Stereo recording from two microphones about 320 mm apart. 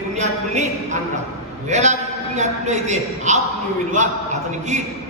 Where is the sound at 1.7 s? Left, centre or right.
Right.